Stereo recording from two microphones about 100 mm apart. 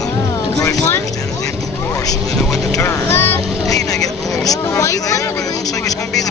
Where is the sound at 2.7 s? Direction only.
35° left (ahead or behind).